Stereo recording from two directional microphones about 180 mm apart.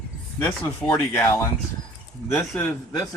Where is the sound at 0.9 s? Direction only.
20° left (ahead or behind).